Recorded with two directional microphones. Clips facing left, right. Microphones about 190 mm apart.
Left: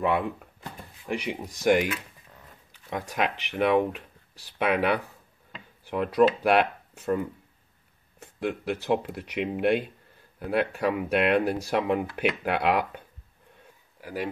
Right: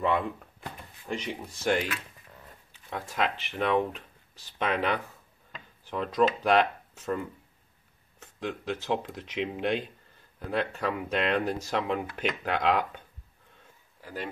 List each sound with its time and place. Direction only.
0.0 s speech: 10° left (ahead or behind)
14.0 s speech: 10° left (ahead or behind)